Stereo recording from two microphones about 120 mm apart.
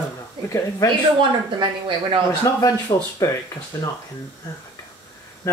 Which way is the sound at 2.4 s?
35° left (ahead or behind).